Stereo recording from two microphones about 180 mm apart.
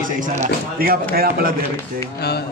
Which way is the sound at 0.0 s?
50° right (ahead or behind).